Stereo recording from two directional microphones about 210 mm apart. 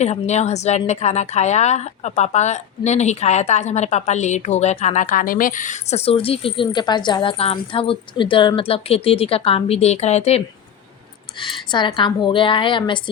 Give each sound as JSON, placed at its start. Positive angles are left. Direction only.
{"t": 0.0, "sound": "a woman's voice", "side_deg": 30}